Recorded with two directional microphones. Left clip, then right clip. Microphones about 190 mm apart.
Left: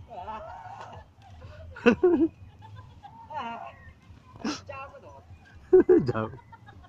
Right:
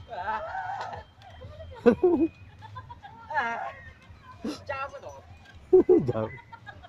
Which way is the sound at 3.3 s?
Centre (ahead or behind).